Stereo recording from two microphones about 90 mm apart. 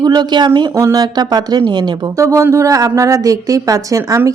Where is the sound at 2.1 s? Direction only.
35° right (ahead or behind).